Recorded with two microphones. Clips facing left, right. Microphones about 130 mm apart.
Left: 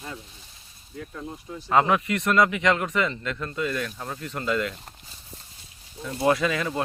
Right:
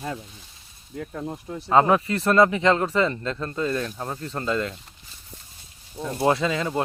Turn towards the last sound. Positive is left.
turn(degrees=-25)  # may be behind; listen again after turning